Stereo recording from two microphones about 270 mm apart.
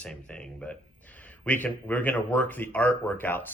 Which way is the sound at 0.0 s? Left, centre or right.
Centre.